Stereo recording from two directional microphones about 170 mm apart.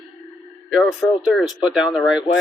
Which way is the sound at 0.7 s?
Centre (ahead or behind).